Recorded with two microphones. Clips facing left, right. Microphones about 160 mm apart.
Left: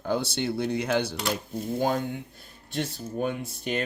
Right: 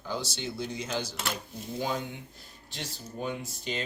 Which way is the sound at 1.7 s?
50° left (ahead or behind).